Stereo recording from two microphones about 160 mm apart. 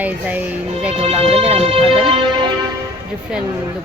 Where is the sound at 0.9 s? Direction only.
40° right (ahead or behind).